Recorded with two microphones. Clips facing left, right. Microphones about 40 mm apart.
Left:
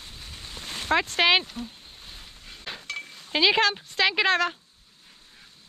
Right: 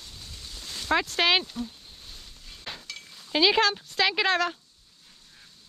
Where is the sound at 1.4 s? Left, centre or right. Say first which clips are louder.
Right 2 dB; centre.